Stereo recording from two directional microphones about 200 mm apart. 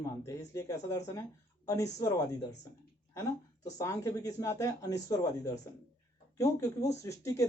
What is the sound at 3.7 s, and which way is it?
Speech, 15° left (ahead or behind).